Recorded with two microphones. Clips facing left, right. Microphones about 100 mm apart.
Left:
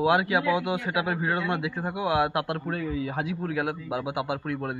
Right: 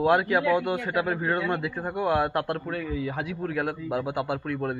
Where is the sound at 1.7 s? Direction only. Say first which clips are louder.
Even; 10° left (ahead or behind).